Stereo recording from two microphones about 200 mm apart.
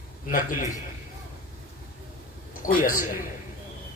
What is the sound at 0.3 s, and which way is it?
Speech, 40° left (ahead or behind).